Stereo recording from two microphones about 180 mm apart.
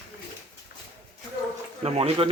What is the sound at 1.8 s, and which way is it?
Speech, 30° right (ahead or behind).